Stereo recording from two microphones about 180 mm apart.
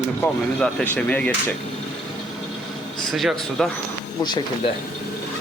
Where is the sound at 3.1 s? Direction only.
Centre (ahead or behind).